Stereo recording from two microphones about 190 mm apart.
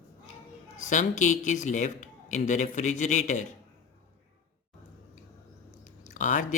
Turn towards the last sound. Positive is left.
turn(degrees=45)  # may be behind; listen again after turning